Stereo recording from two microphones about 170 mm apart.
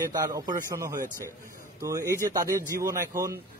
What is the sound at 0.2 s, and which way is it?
Speech, 20° right (ahead or behind).